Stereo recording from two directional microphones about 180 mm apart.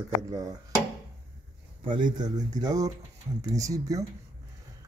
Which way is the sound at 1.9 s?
25° right (ahead or behind).